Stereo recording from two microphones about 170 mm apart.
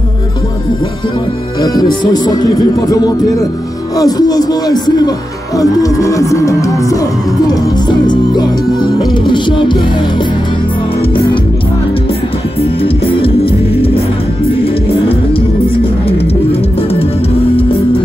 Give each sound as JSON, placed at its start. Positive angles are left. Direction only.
{"t": 1.6, "sound": "music", "side_deg": 25}
{"t": 12.8, "sound": "music", "side_deg": 35}